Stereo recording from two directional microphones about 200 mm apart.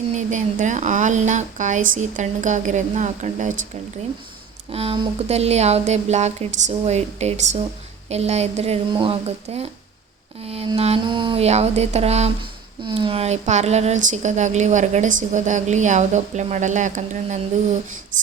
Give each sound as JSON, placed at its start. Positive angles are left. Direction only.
{"t": 0.2, "sound": "speech", "side_deg": -40}
{"t": 4.7, "sound": "speech", "side_deg": -30}